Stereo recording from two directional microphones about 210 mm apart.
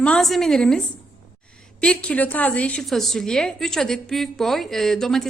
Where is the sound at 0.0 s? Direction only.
5° left (ahead or behind).